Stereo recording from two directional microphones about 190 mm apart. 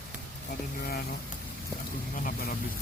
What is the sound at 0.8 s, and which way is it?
Speech, 55° left (ahead or behind).